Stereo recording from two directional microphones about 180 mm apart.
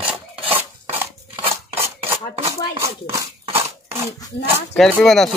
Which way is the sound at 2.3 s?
35° right (ahead or behind).